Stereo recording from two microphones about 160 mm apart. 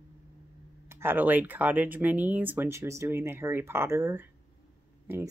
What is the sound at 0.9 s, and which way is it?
Speech, 15° right (ahead or behind).